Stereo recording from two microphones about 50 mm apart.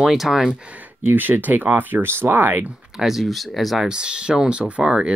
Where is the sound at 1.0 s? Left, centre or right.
Right.